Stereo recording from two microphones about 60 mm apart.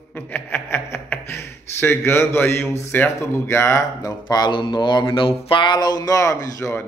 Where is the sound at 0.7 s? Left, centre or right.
Left.